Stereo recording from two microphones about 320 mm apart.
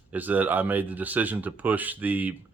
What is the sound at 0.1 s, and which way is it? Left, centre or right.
Speech, centre.